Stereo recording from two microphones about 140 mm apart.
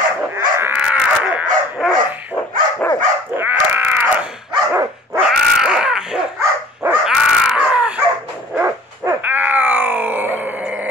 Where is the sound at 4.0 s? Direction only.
5° right (ahead or behind).